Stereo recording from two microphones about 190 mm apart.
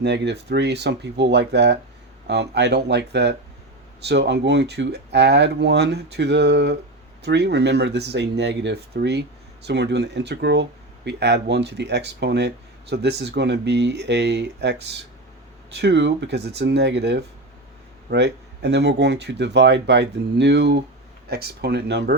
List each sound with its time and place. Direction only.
0.0 s speech: 65° right (ahead or behind)